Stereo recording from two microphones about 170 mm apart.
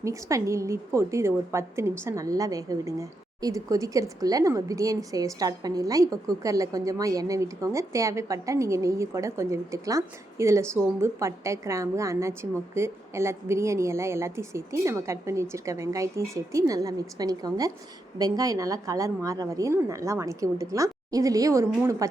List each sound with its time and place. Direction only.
0.0 s a woman's voice: 20° right (ahead or behind)